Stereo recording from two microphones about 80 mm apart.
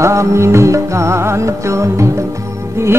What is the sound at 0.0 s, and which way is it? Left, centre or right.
Music, right.